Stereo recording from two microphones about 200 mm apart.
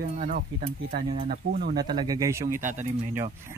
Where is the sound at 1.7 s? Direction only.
20° right (ahead or behind).